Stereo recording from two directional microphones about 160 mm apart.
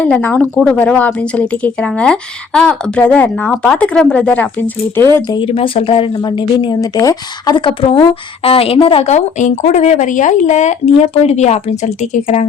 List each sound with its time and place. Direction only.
0.0 s speech: 10° left (ahead or behind)
5.3 s a woman's voice: 35° left (ahead or behind)